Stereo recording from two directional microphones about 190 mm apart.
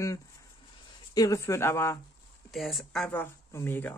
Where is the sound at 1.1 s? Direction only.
15° left (ahead or behind).